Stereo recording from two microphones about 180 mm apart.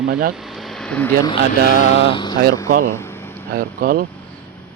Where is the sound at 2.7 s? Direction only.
55° right (ahead or behind).